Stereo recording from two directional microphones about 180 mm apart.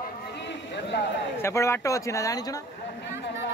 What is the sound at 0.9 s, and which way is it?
Speech, 75° left (ahead or behind).